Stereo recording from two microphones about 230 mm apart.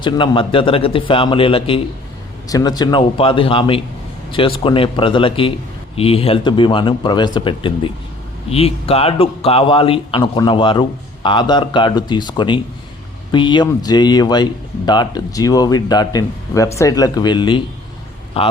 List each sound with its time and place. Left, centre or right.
0.0 s a man's voice: left